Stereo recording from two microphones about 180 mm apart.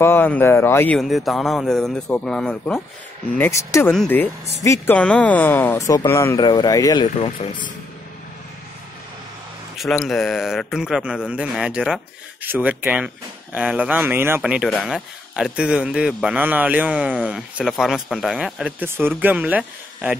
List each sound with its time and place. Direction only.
0.0 s speech: 10° left (ahead or behind)
0.9 s speech: centre (ahead or behind); by 7.7 s 25° left (ahead or behind)
9.8 s speech: centre (ahead or behind)